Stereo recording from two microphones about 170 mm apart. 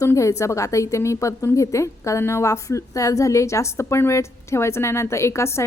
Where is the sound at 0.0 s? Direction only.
20° left (ahead or behind).